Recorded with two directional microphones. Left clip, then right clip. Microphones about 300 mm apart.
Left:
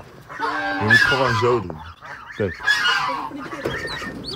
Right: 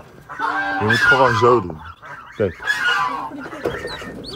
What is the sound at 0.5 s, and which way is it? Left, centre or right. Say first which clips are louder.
Speech: left 1 dB; centre.